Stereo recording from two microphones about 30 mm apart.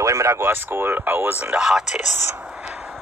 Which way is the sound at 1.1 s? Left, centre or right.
Right.